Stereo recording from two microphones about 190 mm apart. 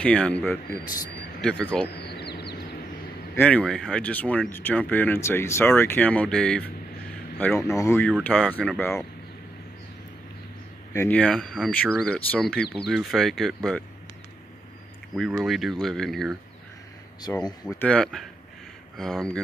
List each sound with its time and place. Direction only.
0.0 s speech: 5° left (ahead or behind)
1.9 s a sound: 60° left (ahead or behind)
3.3 s speech: 5° left (ahead or behind)
10.9 s speech: 10° left (ahead or behind)
15.1 s speech: centre (ahead or behind)
17.5 s speech: 15° left (ahead or behind)
17.8 s speech: 5° left (ahead or behind)